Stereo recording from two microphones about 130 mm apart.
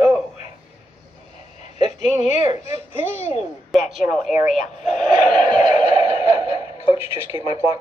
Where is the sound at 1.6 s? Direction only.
60° left (ahead or behind).